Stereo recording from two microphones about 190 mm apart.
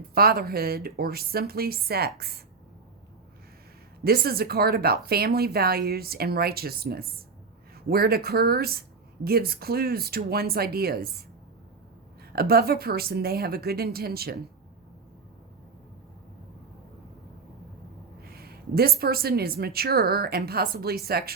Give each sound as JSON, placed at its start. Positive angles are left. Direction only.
{"t": 0.1, "sound": "speech", "side_deg": -55}
{"t": 4.0, "sound": "speech", "side_deg": -55}
{"t": 12.3, "sound": "speech", "side_deg": -55}
{"t": 18.3, "sound": "speech", "side_deg": -55}